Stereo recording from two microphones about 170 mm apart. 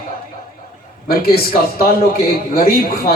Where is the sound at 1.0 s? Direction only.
60° left (ahead or behind).